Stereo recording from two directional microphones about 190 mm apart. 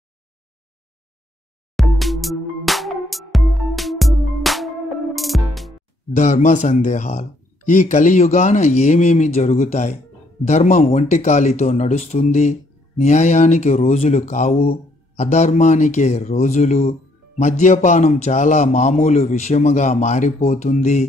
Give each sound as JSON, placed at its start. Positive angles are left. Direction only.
{"t": 1.8, "sound": "music", "side_deg": 0}
{"t": 6.1, "sound": "speech", "side_deg": 40}